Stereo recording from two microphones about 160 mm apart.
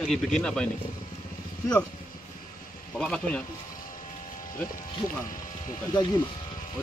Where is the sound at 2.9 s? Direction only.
5° left (ahead or behind).